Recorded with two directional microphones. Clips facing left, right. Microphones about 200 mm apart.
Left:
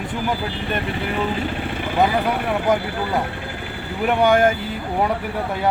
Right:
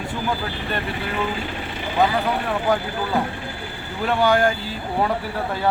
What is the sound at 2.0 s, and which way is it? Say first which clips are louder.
Speech: left 1 dB; 20° left (ahead or behind).